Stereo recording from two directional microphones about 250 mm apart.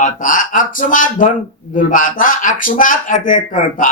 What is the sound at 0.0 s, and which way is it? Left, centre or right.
A man's voice, left.